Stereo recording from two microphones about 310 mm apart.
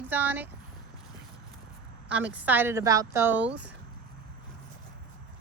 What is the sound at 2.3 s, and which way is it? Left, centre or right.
Speech, centre.